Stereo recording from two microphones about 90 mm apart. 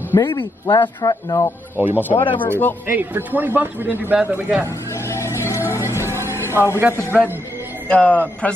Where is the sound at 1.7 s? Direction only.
20° right (ahead or behind).